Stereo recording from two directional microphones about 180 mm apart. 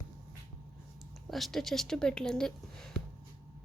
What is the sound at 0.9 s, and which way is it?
Speech, centre (ahead or behind).